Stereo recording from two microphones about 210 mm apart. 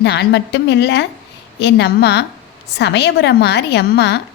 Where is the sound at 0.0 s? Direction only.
55° left (ahead or behind).